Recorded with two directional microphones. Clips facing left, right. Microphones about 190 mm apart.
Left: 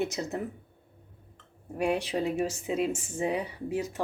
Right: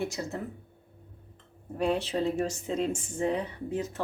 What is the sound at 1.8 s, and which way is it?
Speech, 15° left (ahead or behind).